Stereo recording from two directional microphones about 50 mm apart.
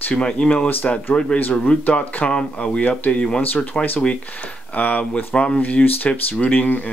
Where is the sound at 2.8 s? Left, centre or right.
Left.